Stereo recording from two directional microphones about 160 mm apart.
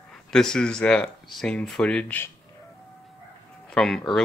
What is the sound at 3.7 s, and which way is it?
Speech, 5° left (ahead or behind).